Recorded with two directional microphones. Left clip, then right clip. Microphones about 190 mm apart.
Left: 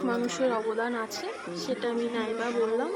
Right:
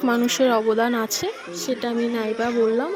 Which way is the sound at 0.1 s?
45° right (ahead or behind).